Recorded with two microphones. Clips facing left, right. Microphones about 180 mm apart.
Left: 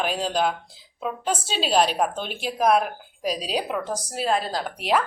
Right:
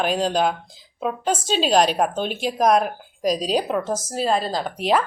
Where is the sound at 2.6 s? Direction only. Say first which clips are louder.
Right 2 dB; 5° left (ahead or behind).